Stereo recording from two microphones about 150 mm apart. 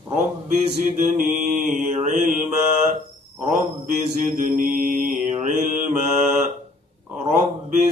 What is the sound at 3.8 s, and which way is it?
Mantra, 55° right (ahead or behind).